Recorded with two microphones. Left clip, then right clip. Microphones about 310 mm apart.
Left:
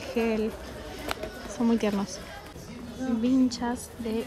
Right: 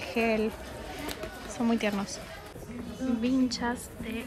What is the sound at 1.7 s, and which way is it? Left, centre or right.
Speech, centre.